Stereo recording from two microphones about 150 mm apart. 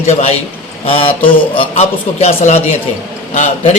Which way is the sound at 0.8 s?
40° left (ahead or behind).